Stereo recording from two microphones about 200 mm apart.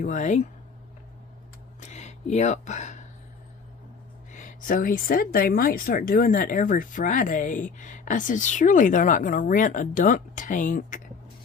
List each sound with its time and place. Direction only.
0.0 s speech: 35° left (ahead or behind)
1.8 s a sound: 35° left (ahead or behind)
4.3 s speech: 40° left (ahead or behind)